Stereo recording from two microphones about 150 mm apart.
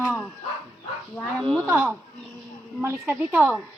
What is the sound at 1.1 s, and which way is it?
Speech, 5° left (ahead or behind).